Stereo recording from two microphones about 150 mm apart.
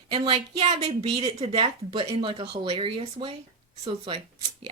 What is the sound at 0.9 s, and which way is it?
Speech, 40° right (ahead or behind).